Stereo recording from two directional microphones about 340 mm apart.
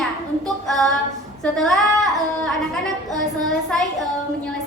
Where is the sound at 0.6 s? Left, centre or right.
Centre.